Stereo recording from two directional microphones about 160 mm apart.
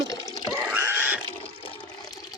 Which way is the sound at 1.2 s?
35° left (ahead or behind).